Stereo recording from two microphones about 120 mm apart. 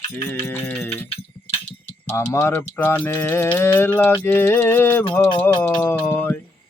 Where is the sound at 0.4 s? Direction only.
20° left (ahead or behind).